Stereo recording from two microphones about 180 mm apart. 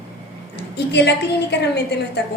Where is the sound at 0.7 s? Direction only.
70° left (ahead or behind).